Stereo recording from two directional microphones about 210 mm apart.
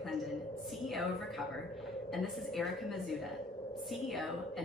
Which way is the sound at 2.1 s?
Centre (ahead or behind).